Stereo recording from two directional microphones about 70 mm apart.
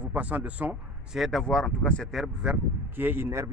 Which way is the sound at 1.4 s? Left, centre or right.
Centre.